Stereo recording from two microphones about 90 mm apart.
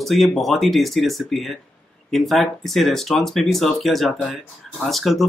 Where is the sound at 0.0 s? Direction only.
Centre (ahead or behind).